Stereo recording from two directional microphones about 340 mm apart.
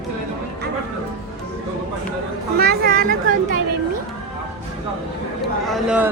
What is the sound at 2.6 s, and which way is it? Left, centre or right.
Speech, right.